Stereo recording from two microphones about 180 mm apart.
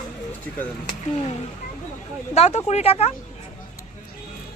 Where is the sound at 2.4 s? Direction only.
40° left (ahead or behind).